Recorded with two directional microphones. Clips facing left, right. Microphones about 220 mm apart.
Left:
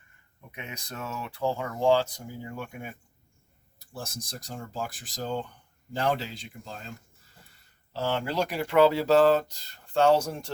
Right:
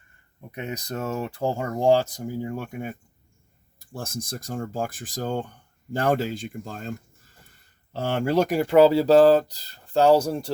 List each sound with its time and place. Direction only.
0.5 s speech: 40° right (ahead or behind)
4.0 s speech: 50° right (ahead or behind)
7.9 s speech: 50° right (ahead or behind)